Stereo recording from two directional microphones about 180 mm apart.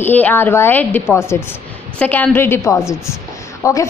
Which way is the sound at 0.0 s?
10° left (ahead or behind).